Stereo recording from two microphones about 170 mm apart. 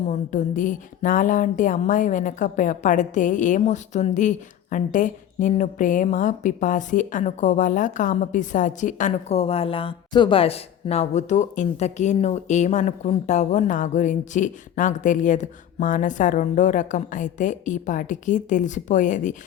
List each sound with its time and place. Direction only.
0.1 s speech: 45° left (ahead or behind)